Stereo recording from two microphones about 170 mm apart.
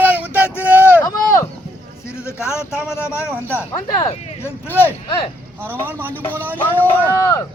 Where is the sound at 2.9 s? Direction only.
15° left (ahead or behind).